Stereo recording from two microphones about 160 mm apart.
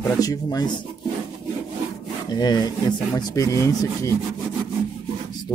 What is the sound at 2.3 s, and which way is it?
Speech, 25° left (ahead or behind).